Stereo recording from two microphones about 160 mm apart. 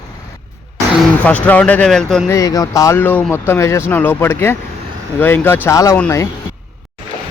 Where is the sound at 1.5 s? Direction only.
10° left (ahead or behind).